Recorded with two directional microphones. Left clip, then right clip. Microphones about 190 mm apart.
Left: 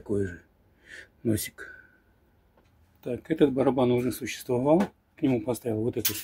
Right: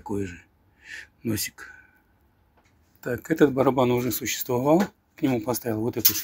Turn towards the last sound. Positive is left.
turn(degrees=5)  # may be behind; listen again after turning